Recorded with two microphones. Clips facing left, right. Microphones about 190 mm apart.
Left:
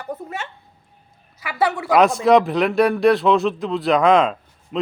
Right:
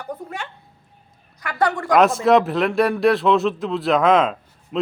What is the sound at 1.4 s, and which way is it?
A man's voice, 5° left (ahead or behind).